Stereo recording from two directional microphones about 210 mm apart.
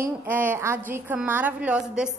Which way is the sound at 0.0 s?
10° right (ahead or behind).